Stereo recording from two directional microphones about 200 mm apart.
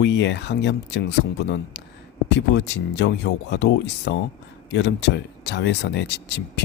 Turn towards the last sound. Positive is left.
turn(degrees=60)  # may be behind; listen again after turning